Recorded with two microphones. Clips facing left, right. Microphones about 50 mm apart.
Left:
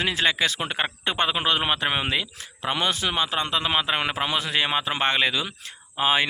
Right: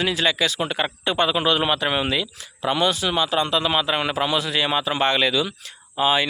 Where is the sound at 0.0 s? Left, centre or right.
Left.